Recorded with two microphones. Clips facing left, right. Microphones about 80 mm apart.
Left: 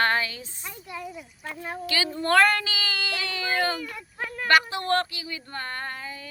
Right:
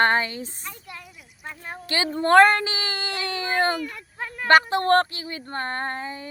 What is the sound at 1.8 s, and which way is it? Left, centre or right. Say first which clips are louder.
Speech: right 5 dB; right.